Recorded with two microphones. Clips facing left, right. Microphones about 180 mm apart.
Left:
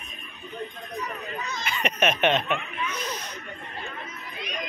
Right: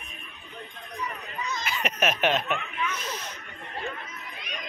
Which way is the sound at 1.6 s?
5° right (ahead or behind).